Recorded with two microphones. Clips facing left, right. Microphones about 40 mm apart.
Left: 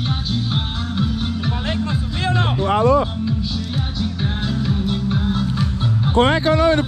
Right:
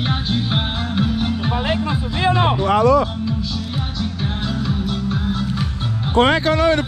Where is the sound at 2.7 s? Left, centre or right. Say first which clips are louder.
Even; right.